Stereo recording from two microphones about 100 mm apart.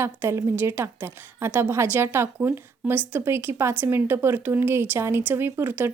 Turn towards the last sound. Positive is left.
turn(degrees=-20)  # may be behind; listen again after turning